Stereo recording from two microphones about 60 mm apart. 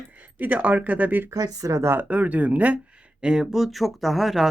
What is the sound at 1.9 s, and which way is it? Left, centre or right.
Speech, right.